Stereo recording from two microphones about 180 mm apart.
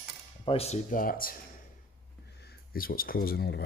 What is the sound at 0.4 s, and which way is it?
Speech, 35° left (ahead or behind).